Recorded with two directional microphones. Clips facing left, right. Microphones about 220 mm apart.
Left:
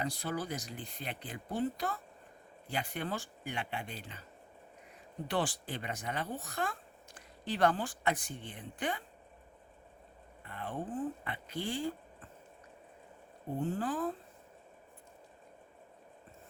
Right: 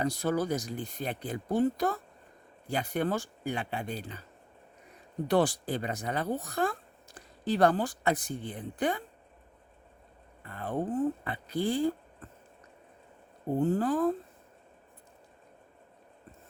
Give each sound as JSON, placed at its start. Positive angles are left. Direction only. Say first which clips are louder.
{"t": 0.0, "sound": "speech", "louder": "right 8 dB", "side_deg": -45}
{"t": 5.3, "sound": "speech", "louder": "right 8 dB", "side_deg": -40}
{"t": 10.4, "sound": "speech", "louder": "right 7 dB", "side_deg": -40}
{"t": 13.6, "sound": "speech", "louder": "right 8 dB", "side_deg": -40}